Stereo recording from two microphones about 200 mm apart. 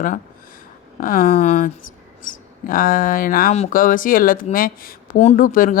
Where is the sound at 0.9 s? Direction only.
45° left (ahead or behind).